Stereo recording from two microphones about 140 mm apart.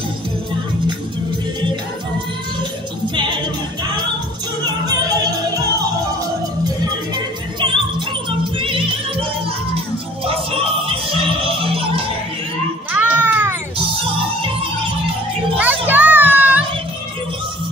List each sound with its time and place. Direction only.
4.8 s music: 30° right (ahead or behind)
8.5 s music: 40° right (ahead or behind)
10.2 s music: 40° right (ahead or behind)
12.9 s music: 10° right (ahead or behind)
15.5 s children playing: 10° right (ahead or behind)